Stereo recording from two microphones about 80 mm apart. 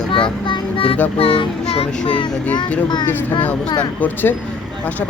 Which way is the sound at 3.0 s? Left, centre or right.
Centre.